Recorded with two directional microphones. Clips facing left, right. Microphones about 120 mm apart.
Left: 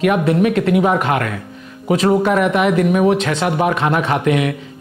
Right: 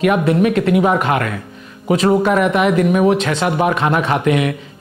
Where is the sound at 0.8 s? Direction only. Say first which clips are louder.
Right 1 dB; 25° right (ahead or behind).